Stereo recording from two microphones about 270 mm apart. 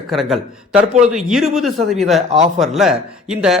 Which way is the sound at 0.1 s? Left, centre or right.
Centre.